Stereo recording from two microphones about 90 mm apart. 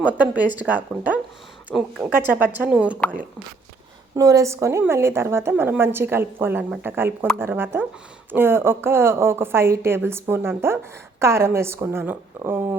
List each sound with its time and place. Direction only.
0.0 s speech: 15° right (ahead or behind)
1.7 s a woman's voice: 5° left (ahead or behind)
2.1 s a woman's voice: 20° right (ahead or behind)
4.2 s a woman's voice: 40° right (ahead or behind)